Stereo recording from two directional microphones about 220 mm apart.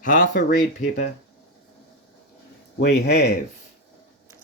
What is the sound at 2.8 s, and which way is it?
Speech, 45° left (ahead or behind).